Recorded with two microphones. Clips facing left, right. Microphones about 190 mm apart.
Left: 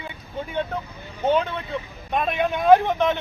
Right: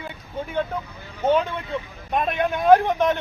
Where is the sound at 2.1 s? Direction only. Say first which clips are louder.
Even; centre (ahead or behind).